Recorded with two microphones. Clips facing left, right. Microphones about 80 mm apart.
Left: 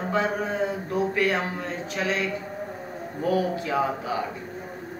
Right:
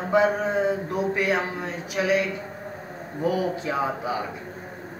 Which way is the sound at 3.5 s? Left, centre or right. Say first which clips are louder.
Left 1 dB; right.